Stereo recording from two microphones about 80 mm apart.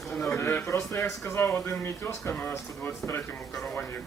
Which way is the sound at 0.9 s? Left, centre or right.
Left.